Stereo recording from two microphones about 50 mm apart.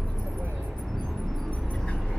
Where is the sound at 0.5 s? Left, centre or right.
Right.